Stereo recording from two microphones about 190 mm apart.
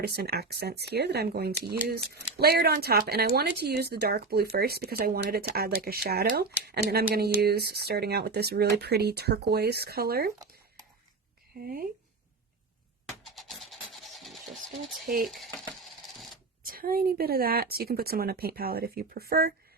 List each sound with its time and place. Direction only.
0.0 s a woman's voice: 55° right (ahead or behind)
11.6 s speech: 50° right (ahead or behind)
13.2 s music: centre (ahead or behind)
15.2 s speech: centre (ahead or behind)
16.6 s speech: 50° right (ahead or behind)